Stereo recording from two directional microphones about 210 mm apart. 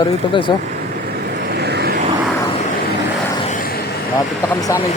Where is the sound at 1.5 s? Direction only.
50° right (ahead or behind).